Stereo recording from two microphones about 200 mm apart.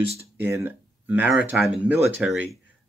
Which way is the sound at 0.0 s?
30° right (ahead or behind).